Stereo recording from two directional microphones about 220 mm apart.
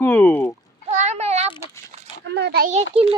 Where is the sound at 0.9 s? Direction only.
30° right (ahead or behind).